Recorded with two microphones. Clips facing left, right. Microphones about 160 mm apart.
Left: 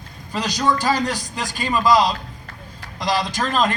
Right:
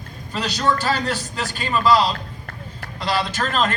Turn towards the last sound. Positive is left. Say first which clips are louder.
# left 1 dB
turn(degrees=15)  # may be behind; listen again after turning